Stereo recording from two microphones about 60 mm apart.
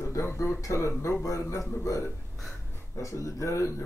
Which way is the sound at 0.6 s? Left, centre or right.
Left.